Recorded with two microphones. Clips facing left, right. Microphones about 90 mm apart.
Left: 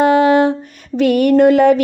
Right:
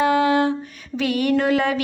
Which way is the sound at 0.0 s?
50° left (ahead or behind).